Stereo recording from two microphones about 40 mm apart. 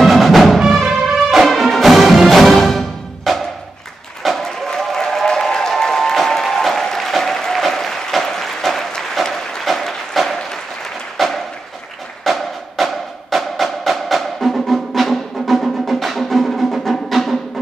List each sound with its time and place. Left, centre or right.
0.0 s music: centre
0.7 s music: centre
1.1 s music: centre
4.4 s applause: centre
8.3 s a sound: centre
12.3 s music: centre